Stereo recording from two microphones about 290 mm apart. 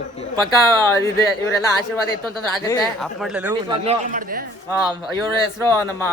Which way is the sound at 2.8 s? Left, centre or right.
Centre.